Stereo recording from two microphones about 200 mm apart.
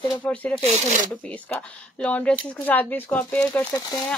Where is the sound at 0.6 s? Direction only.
35° right (ahead or behind).